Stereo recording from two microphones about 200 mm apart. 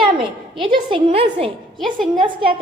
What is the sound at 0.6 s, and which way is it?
A woman's voice, 25° right (ahead or behind).